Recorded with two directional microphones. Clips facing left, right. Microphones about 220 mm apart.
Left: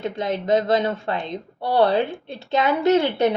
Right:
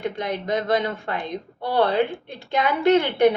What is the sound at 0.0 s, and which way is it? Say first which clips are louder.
A woman's voice: left 2 dB; 20° left (ahead or behind).